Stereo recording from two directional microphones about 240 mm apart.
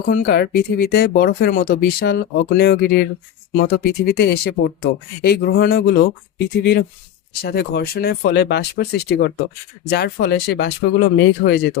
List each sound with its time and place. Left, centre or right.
0.0 s speech: left
7.4 s speech: left